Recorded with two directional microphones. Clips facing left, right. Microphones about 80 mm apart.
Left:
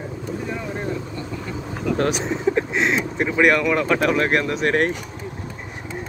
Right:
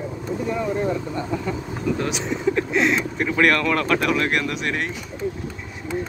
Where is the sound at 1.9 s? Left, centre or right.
Left.